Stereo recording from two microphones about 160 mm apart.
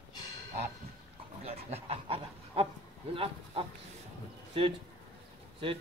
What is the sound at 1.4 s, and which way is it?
Speech, 40° right (ahead or behind).